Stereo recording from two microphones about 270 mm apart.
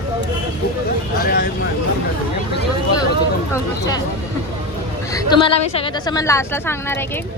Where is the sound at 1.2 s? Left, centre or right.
Left.